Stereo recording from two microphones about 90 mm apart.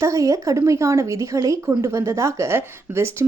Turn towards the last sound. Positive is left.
turn(degrees=-30)  # may be behind; listen again after turning